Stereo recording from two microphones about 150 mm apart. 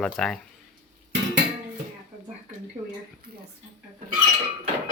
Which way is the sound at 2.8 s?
35° right (ahead or behind).